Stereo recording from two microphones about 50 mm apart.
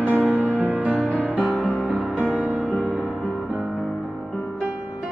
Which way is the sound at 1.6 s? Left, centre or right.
Centre.